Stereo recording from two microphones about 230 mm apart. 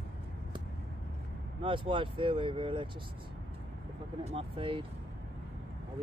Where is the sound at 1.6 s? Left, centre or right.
Right.